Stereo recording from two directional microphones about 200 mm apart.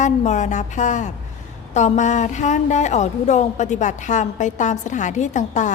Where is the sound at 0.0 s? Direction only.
35° left (ahead or behind).